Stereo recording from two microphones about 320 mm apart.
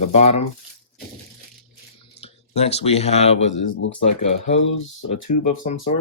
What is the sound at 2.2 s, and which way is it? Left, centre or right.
Speech, centre.